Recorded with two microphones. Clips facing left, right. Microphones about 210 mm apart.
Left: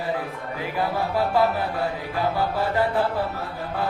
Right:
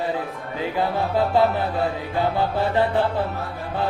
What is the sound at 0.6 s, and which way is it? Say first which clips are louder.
Music: right 3 dB; 25° right (ahead or behind).